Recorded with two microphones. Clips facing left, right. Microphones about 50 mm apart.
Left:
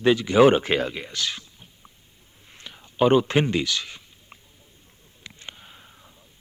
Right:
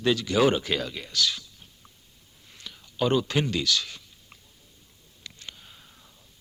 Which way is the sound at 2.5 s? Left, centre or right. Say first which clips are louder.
Left 6 dB; left.